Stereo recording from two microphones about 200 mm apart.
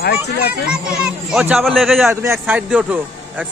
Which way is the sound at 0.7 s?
5° right (ahead or behind).